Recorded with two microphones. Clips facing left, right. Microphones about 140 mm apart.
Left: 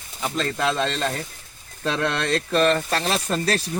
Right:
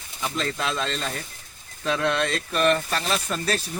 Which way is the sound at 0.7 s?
70° left (ahead or behind).